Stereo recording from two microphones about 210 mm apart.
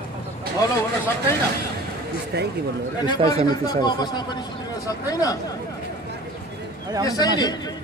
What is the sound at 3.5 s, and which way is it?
A man's voice, 20° left (ahead or behind).